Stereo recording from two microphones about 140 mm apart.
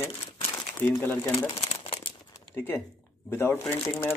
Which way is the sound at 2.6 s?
15° left (ahead or behind).